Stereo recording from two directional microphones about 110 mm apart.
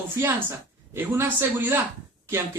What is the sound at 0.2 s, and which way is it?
Speech, 20° right (ahead or behind).